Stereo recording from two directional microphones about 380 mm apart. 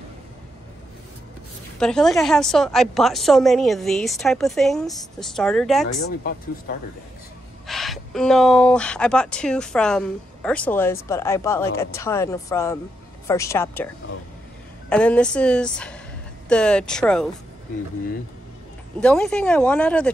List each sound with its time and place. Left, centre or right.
1.8 s speech: centre
6.0 s speech: left
7.6 s a woman's voice: centre
14.9 s speech: centre
18.9 s speech: centre